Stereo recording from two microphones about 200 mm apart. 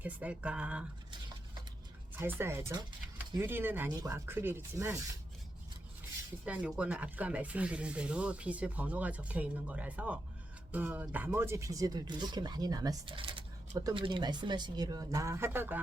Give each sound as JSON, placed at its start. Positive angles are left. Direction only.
{"t": 0.0, "sound": "speech", "side_deg": -5}
{"t": 2.1, "sound": "speech", "side_deg": -10}
{"t": 6.4, "sound": "speech", "side_deg": -5}